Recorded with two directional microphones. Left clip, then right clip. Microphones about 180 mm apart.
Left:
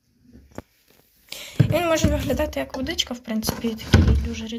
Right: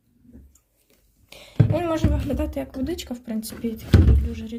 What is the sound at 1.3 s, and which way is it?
A woman's voice, 5° right (ahead or behind).